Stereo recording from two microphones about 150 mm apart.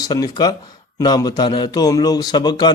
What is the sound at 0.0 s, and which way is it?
Speech, 25° left (ahead or behind).